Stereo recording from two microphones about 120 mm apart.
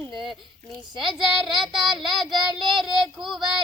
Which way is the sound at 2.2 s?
40° right (ahead or behind).